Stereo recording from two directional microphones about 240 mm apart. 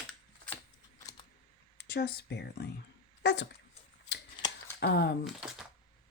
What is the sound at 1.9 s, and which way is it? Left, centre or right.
Speech, left.